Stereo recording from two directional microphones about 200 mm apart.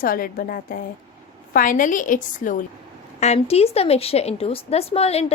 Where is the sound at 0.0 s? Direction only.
45° left (ahead or behind).